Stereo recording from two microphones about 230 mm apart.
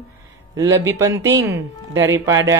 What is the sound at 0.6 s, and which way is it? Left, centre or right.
Speech, centre.